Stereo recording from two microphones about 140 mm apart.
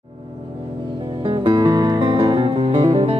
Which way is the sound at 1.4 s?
30° right (ahead or behind).